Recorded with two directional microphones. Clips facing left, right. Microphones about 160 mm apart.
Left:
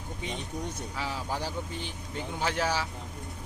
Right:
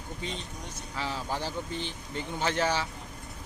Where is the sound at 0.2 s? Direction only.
15° left (ahead or behind).